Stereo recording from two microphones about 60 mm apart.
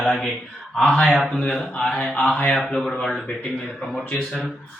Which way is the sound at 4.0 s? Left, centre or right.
Left.